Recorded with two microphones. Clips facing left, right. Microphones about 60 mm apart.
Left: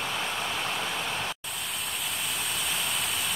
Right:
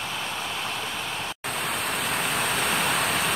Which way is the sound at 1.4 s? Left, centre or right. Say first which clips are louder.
Right 8 dB; right.